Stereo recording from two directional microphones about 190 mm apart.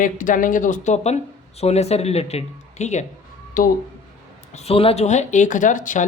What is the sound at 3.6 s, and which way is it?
Speech, 50° left (ahead or behind).